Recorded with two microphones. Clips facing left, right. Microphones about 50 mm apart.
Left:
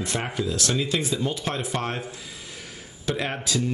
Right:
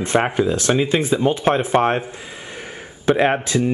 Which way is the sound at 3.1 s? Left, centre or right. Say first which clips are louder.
Right 11 dB; right.